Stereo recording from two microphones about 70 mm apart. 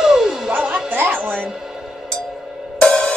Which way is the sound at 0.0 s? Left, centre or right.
Centre.